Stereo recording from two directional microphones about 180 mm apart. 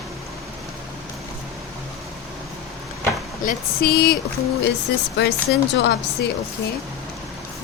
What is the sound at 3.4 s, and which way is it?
Speech, 50° left (ahead or behind).